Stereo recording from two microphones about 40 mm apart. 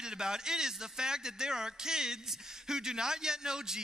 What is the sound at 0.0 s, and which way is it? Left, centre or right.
Speech, centre.